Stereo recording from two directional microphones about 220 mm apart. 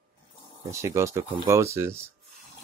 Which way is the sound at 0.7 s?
15° right (ahead or behind).